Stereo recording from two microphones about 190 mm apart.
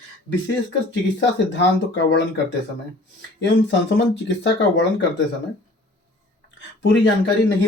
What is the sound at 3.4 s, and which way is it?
Speech, 70° left (ahead or behind).